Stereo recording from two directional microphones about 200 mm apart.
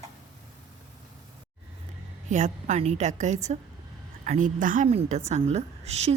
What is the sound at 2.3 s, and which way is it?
A woman's voice, 35° right (ahead or behind).